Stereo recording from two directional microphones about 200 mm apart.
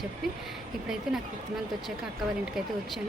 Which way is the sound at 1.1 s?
5° right (ahead or behind).